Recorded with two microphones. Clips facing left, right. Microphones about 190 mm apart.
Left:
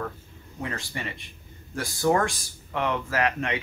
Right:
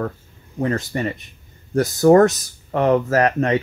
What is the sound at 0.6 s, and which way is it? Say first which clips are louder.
Speech: right 12 dB; 45° right (ahead or behind).